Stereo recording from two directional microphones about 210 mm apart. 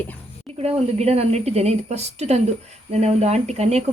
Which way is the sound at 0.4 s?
30° right (ahead or behind).